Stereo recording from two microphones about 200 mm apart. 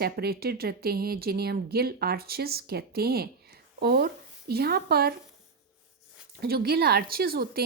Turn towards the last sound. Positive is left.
turn(degrees=-50)  # may be behind; listen again after turning